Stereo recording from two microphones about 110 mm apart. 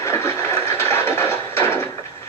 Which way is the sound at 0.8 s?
20° left (ahead or behind).